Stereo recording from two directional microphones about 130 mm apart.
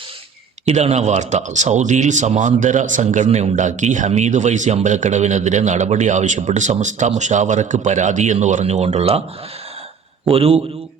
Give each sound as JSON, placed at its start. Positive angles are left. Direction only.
{"t": 0.6, "sound": "a man's voice", "side_deg": -55}
{"t": 10.2, "sound": "a man's voice", "side_deg": -45}